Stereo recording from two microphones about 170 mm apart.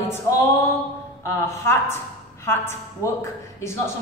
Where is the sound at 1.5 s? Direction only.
15° left (ahead or behind).